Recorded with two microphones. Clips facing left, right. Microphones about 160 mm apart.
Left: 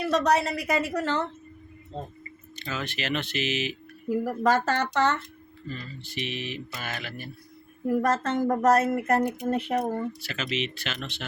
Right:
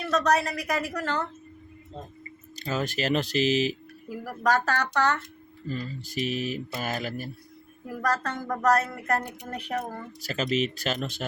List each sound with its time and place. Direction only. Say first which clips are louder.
0.3 s a woman's voice: left 2 dB; 25° left (ahead or behind)
2.6 s speech: right 5 dB; 40° right (ahead or behind)
4.1 s a woman's voice: left 3 dB; 20° left (ahead or behind)
5.6 s speech: right 5 dB; 40° right (ahead or behind)
7.9 s a woman's voice: left 5 dB; 20° left (ahead or behind)
10.2 s speech: right 4 dB; 40° right (ahead or behind)